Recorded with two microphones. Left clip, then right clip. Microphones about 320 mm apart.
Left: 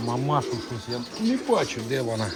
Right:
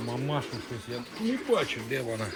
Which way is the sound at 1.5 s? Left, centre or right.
Left.